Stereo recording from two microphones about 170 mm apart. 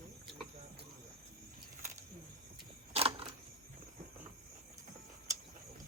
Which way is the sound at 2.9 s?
35° right (ahead or behind).